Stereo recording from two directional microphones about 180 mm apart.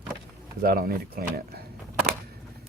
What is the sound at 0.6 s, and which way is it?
Speech, 55° right (ahead or behind).